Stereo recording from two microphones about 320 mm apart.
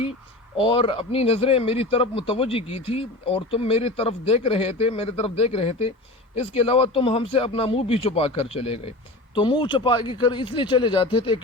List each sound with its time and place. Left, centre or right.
0.5 s speech: centre